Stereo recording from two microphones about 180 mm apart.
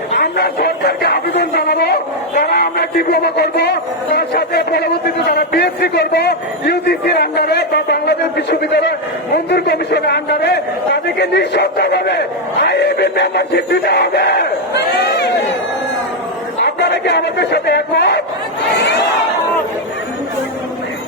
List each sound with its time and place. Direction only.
0.1 s speech: 60° left (ahead or behind)
16.6 s a man's voice: 70° left (ahead or behind)